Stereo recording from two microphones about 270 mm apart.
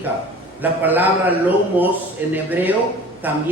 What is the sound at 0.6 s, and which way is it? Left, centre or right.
A man's voice, centre.